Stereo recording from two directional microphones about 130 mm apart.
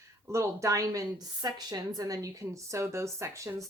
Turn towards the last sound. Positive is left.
turn(degrees=-20)  # may be behind; listen again after turning